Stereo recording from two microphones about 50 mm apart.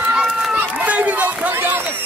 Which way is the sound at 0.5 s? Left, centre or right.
Right.